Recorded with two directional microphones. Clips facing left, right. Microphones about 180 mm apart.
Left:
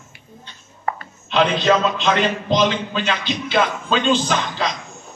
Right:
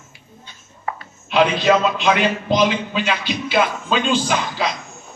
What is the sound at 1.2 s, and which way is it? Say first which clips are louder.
A man's voice: right 1 dB; 10° right (ahead or behind).